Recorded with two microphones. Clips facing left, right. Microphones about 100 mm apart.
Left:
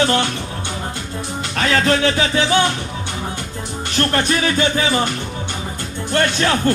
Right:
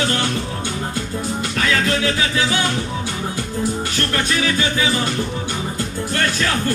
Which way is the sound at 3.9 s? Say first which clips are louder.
Left 3 dB; 35° left (ahead or behind).